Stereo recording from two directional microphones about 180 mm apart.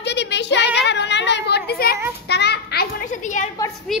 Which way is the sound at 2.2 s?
70° left (ahead or behind).